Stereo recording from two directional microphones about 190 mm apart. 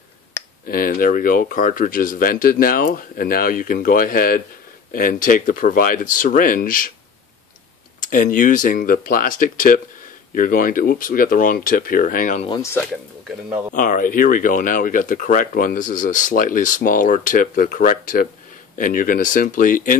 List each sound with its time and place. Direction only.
0.3 s a sound: 15° left (ahead or behind)
0.7 s speech: 50° left (ahead or behind)
8.1 s speech: 45° left (ahead or behind)
13.7 s speech: 45° left (ahead or behind)